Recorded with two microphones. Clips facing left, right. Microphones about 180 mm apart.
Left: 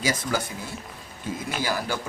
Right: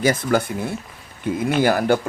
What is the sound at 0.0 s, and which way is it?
Speech, 55° right (ahead or behind).